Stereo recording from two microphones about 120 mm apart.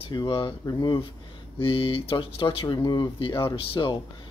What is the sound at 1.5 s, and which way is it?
Speech, 50° left (ahead or behind).